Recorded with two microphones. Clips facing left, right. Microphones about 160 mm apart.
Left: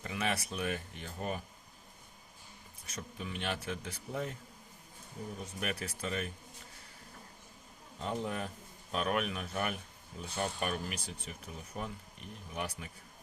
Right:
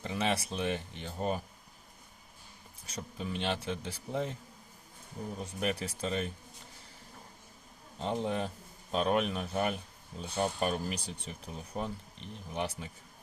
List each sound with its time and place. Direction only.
0.0 s speech: 30° right (ahead or behind)
2.8 s speech: 30° right (ahead or behind)
5.5 s speech: 30° right (ahead or behind)
7.9 s speech: 30° right (ahead or behind)